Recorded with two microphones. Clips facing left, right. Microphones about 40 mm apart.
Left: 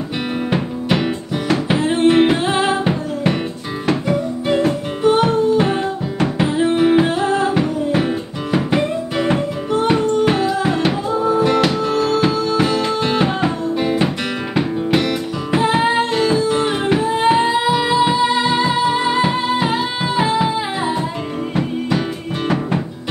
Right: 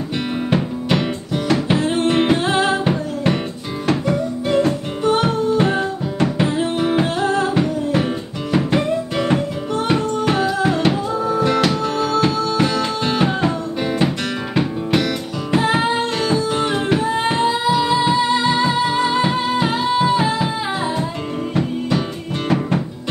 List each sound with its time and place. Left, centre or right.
0.5 s music: centre
12.2 s music: centre